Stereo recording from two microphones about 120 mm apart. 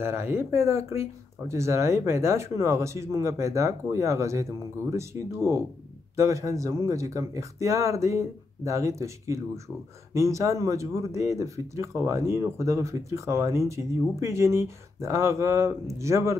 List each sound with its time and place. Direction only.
0.0 s speech: 20° right (ahead or behind)